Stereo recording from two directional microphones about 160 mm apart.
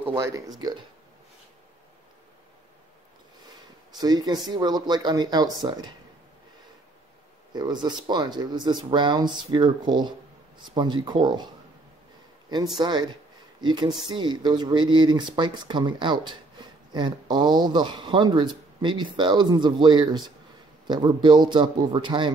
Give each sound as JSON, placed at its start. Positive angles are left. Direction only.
{"t": 0.0, "sound": "speech", "side_deg": -20}
{"t": 4.0, "sound": "speech", "side_deg": -25}
{"t": 7.5, "sound": "speech", "side_deg": -25}
{"t": 12.7, "sound": "speech", "side_deg": -25}